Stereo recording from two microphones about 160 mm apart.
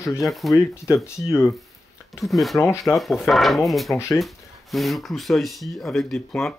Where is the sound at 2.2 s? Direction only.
Centre (ahead or behind).